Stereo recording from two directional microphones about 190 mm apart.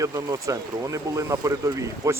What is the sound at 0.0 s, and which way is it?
Speech, 20° right (ahead or behind).